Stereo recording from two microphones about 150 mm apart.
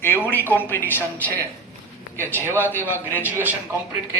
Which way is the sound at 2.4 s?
15° right (ahead or behind).